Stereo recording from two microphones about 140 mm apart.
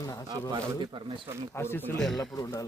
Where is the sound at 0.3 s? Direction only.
30° right (ahead or behind).